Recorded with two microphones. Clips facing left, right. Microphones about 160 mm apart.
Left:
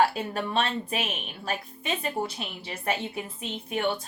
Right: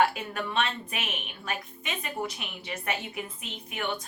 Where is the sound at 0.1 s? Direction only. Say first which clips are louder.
Left 3 dB; 30° left (ahead or behind).